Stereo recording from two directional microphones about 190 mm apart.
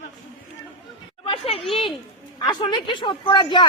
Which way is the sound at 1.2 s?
30° left (ahead or behind).